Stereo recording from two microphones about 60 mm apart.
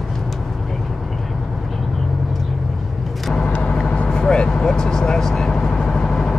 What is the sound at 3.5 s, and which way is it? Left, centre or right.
Vehicle, centre.